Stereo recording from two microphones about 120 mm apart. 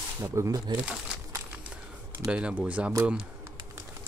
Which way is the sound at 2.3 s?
10° right (ahead or behind).